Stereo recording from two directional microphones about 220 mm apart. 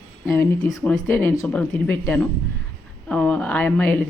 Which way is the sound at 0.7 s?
Centre (ahead or behind).